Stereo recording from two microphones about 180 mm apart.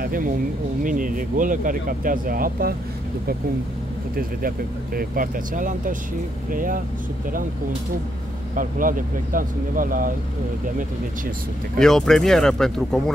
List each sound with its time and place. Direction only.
0.0 s a sound: 50° right (ahead or behind)
0.8 s speech: 50° right (ahead or behind)
4.2 s speech: 55° right (ahead or behind)
8.5 s speech: 50° right (ahead or behind)
11.8 s speech: 5° left (ahead or behind)